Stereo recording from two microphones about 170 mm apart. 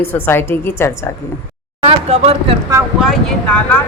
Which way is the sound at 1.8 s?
35° right (ahead or behind).